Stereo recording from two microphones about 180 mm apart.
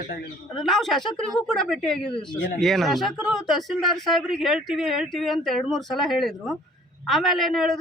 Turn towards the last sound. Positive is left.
turn(degrees=0)  # may be behind; listen again after turning